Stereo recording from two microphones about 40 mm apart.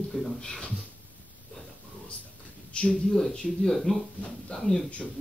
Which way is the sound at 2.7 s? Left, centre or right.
Left.